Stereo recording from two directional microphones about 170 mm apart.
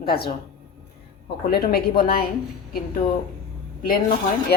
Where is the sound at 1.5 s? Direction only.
65° left (ahead or behind).